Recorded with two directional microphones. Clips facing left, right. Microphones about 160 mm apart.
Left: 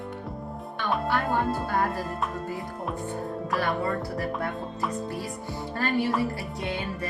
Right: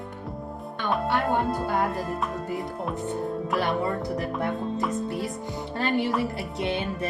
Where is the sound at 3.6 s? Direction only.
20° right (ahead or behind).